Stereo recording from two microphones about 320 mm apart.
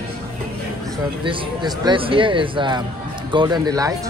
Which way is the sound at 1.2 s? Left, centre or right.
Centre.